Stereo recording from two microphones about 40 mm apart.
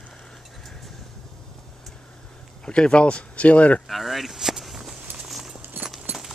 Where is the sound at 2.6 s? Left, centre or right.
Left.